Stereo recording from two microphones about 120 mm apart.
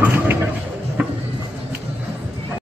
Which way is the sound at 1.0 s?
10° right (ahead or behind).